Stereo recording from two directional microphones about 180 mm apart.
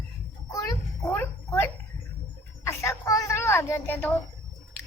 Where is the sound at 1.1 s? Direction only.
10° left (ahead or behind).